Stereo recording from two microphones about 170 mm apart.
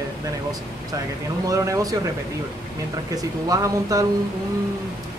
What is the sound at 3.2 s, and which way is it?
Speech, 20° right (ahead or behind).